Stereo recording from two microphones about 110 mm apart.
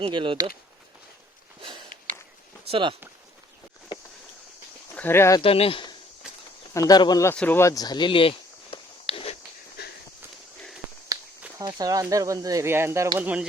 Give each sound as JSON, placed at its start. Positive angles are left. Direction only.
{"t": 0.0, "sound": "speech", "side_deg": -50}
{"t": 1.6, "sound": "a sound", "side_deg": -45}
{"t": 2.6, "sound": "speech", "side_deg": -55}
{"t": 4.9, "sound": "speech", "side_deg": 20}
{"t": 5.4, "sound": "speech", "side_deg": 60}
{"t": 6.7, "sound": "speech", "side_deg": 35}
{"t": 7.3, "sound": "speech", "side_deg": 15}
{"t": 7.6, "sound": "a sound", "side_deg": 35}
{"t": 11.1, "sound": "a sound", "side_deg": -30}
{"t": 11.6, "sound": "speech", "side_deg": -35}
{"t": 13.1, "sound": "speech", "side_deg": -10}